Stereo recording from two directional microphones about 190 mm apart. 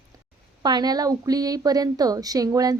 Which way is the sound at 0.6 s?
20° right (ahead or behind).